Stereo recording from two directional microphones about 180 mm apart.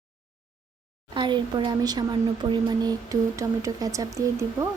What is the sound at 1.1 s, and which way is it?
Speech, 25° right (ahead or behind).